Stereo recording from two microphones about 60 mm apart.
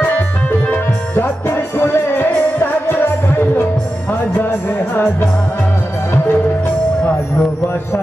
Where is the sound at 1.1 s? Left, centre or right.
Left.